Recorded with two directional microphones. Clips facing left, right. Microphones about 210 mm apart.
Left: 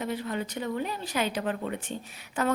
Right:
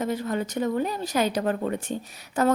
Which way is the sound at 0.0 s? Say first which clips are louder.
Right 5 dB; 45° right (ahead or behind).